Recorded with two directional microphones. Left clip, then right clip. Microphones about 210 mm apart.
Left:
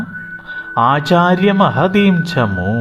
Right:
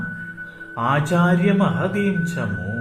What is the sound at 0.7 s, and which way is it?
Speech, 30° left (ahead or behind).